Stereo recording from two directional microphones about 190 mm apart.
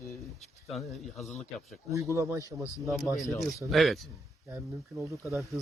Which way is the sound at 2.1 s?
15° right (ahead or behind).